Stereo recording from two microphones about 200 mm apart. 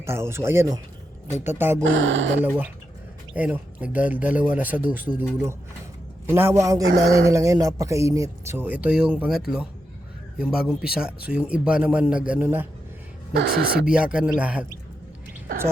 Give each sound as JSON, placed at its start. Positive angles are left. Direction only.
{"t": 0.0, "sound": "speech", "side_deg": -10}
{"t": 1.8, "sound": "speech", "side_deg": -65}
{"t": 3.3, "sound": "speech", "side_deg": -10}
{"t": 6.8, "sound": "speech", "side_deg": -55}
{"t": 7.3, "sound": "a man's voice", "side_deg": -15}
{"t": 13.3, "sound": "speech", "side_deg": -50}
{"t": 13.8, "sound": "a man's voice", "side_deg": -5}